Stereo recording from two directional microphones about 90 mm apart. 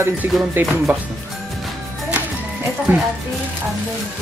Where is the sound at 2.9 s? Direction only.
25° right (ahead or behind).